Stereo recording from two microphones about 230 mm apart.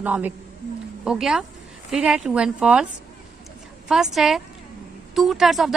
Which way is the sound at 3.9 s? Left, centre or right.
Centre.